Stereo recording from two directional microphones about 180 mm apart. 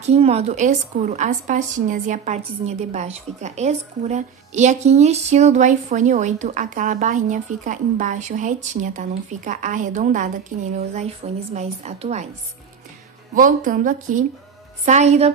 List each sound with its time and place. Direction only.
0.0 s a woman's voice: 35° right (ahead or behind)
11.5 s a woman's voice: 35° right (ahead or behind)
13.3 s a woman's voice: 45° right (ahead or behind)